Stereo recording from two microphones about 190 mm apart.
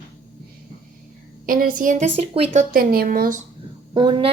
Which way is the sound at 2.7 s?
50° right (ahead or behind).